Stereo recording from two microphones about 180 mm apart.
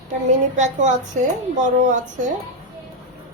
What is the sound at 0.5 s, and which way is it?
Speech, 45° right (ahead or behind).